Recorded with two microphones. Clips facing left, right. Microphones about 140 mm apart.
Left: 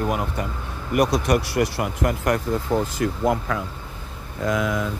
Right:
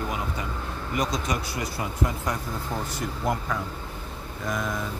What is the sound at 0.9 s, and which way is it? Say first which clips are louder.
Speech: left 9 dB; 70° left (ahead or behind).